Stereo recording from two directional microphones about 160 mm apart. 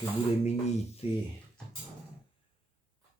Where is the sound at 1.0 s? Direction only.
40° left (ahead or behind).